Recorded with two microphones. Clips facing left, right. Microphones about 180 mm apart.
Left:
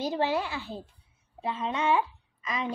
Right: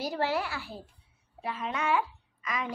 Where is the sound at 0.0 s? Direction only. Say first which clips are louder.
Left 2 dB; 20° left (ahead or behind).